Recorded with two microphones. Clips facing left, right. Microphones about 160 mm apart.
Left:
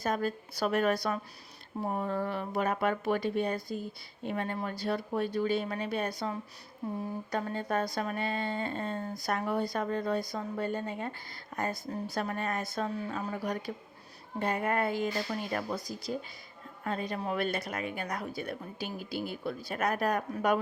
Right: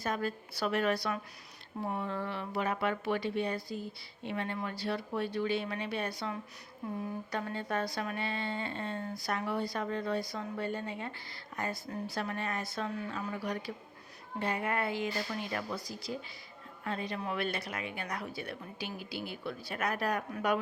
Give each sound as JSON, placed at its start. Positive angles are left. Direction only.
{"t": 0.0, "sound": "speech", "side_deg": 40}